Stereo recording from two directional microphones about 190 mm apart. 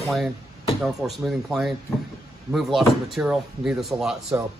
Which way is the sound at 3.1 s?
5° right (ahead or behind).